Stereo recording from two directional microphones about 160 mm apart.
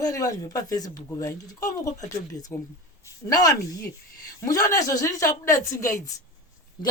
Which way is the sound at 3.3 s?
25° left (ahead or behind).